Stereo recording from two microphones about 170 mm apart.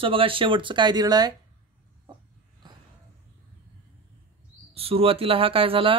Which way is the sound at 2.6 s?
25° right (ahead or behind).